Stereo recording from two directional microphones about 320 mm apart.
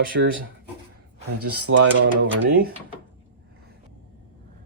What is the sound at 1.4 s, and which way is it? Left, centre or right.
Speech, right.